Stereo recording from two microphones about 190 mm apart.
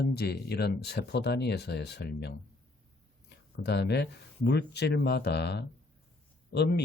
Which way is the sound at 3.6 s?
65° left (ahead or behind).